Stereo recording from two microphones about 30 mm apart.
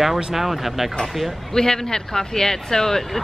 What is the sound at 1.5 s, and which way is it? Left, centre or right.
Speech, centre.